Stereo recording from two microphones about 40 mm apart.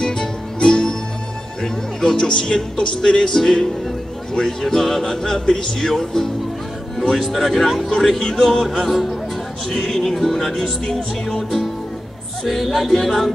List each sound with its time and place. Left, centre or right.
0.0 s music: centre
2.3 s speech: centre
7.0 s speech: centre
11.2 s music: centre
12.4 s speech: centre